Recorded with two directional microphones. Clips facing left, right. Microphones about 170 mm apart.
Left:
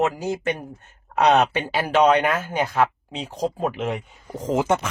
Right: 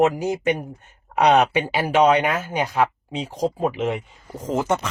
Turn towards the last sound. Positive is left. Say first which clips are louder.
# left 1 dB
turn(degrees=15)  # may be behind; listen again after turning